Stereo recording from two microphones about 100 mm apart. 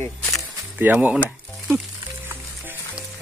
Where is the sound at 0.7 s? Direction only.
20° right (ahead or behind).